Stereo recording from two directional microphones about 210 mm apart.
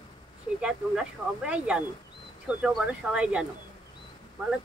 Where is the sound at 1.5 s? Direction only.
5° right (ahead or behind).